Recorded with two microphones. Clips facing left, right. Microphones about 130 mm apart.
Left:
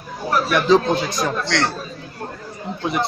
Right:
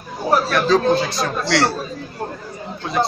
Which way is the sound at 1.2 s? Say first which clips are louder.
Right 2 dB; 5° right (ahead or behind).